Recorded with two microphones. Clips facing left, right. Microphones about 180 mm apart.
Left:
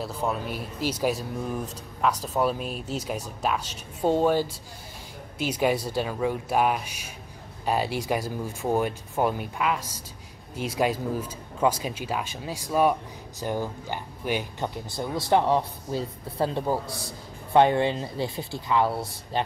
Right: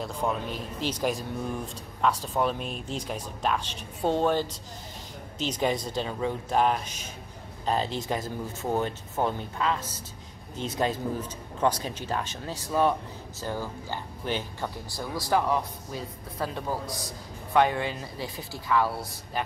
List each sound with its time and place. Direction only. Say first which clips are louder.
0.0 s speech: left 1 dB; 10° left (ahead or behind); by 19.4 s 25° left (ahead or behind)